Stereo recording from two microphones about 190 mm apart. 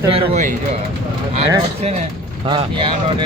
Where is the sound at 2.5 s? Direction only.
25° right (ahead or behind).